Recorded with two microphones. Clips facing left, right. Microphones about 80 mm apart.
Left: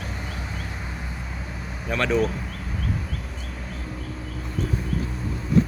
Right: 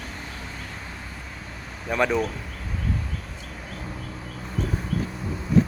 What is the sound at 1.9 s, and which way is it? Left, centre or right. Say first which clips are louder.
Speech: even; centre.